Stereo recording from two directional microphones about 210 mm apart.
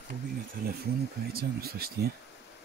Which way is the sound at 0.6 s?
50° right (ahead or behind).